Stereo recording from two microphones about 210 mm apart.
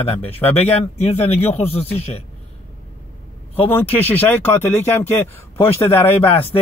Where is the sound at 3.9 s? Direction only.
10° left (ahead or behind).